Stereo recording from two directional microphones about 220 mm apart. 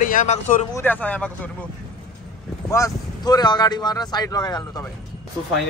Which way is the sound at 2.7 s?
15° left (ahead or behind).